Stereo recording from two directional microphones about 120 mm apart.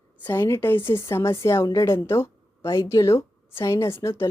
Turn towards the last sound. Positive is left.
turn(degrees=20)  # may be behind; listen again after turning